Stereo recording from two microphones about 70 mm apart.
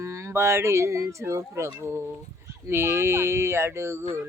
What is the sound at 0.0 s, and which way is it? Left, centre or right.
A child's voice, right.